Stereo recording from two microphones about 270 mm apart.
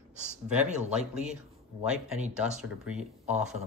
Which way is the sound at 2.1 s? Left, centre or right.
Right.